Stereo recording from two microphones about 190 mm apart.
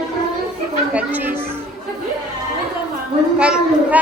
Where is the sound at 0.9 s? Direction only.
10° right (ahead or behind).